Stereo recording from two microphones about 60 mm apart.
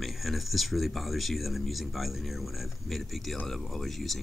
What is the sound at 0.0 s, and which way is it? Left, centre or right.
Speech, centre.